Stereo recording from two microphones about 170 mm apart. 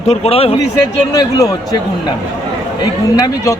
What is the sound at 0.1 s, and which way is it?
Speech, 35° left (ahead or behind).